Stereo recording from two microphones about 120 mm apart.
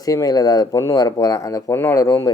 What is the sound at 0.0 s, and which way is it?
Speech, 30° left (ahead or behind).